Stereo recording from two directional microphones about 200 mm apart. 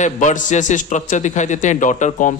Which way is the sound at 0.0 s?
40° left (ahead or behind).